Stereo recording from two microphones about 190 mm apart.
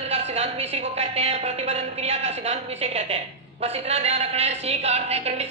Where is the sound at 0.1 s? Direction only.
35° right (ahead or behind).